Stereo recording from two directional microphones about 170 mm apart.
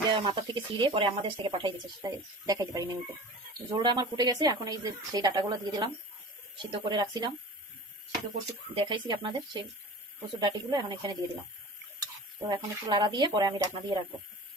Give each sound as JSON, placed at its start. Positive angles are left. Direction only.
{"t": 0.1, "sound": "speech", "side_deg": -30}
{"t": 8.7, "sound": "speech", "side_deg": -30}